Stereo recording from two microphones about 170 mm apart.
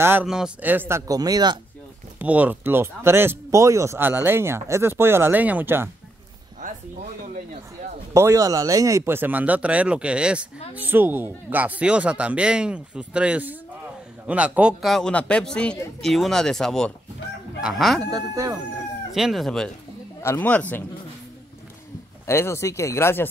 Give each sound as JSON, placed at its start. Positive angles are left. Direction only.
{"t": 0.0, "sound": "speech", "side_deg": -10}
{"t": 2.1, "sound": "speech", "side_deg": -10}
{"t": 8.1, "sound": "a man's voice", "side_deg": -15}
{"t": 18.1, "sound": "speech", "side_deg": -20}
{"t": 19.1, "sound": "a man's voice", "side_deg": 0}
{"t": 20.2, "sound": "speech", "side_deg": 15}
{"t": 22.2, "sound": "speech", "side_deg": 15}